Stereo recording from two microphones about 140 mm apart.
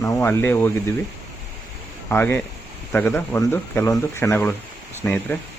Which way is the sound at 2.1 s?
15° left (ahead or behind).